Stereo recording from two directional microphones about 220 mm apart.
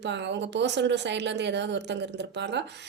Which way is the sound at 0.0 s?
50° right (ahead or behind).